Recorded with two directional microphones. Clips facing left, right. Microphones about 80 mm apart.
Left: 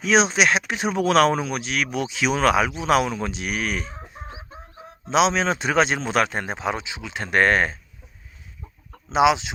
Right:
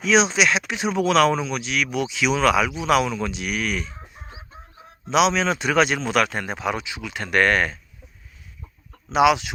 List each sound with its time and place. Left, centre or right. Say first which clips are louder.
0.0 s speech: even; left
9.0 s speech: right 1 dB; left